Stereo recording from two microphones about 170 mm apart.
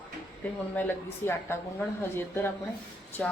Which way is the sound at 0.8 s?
15° left (ahead or behind).